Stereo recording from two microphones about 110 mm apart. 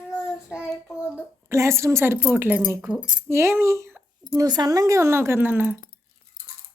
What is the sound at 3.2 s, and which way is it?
Speech, 25° right (ahead or behind).